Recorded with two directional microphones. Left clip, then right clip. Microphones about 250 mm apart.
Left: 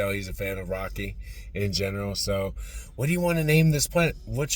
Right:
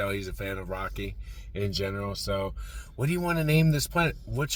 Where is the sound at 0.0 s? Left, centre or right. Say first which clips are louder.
Left 3 dB; centre.